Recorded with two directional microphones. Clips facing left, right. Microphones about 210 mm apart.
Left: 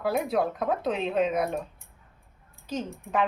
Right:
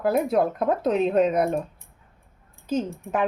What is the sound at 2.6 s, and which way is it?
Speech, 45° right (ahead or behind).